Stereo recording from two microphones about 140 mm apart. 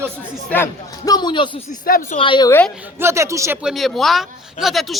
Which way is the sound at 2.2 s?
35° left (ahead or behind).